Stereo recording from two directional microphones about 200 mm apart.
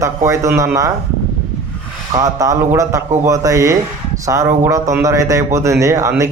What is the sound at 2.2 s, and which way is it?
Speech, 15° right (ahead or behind).